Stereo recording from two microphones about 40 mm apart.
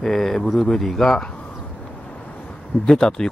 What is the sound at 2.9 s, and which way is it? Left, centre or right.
Speech, centre.